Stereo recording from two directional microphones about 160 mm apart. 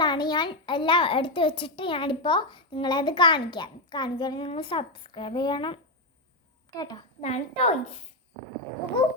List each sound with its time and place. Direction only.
0.0 s a child's voice: 30° left (ahead or behind)
7.2 s a child's voice: 45° left (ahead or behind)